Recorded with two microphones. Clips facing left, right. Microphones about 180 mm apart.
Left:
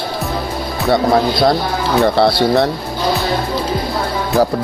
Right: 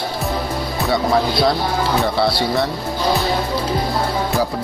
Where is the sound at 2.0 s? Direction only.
60° left (ahead or behind).